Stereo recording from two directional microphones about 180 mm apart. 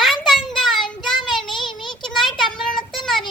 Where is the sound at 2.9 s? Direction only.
Centre (ahead or behind).